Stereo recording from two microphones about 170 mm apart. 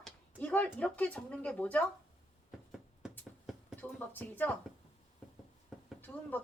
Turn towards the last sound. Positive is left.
turn(degrees=10)  # may be behind; listen again after turning